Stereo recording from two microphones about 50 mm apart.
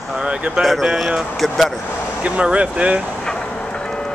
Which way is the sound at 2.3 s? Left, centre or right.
Right.